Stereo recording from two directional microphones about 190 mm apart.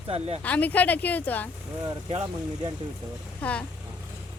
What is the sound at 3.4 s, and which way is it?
Speech, 5° left (ahead or behind).